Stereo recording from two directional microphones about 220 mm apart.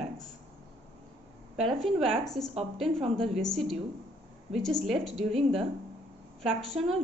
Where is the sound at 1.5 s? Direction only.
Centre (ahead or behind).